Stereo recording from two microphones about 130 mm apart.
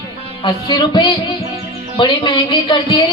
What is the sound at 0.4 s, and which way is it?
Speech, 35° left (ahead or behind).